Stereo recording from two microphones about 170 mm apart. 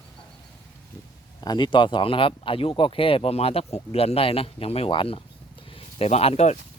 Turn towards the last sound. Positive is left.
turn(degrees=40)  # may be behind; listen again after turning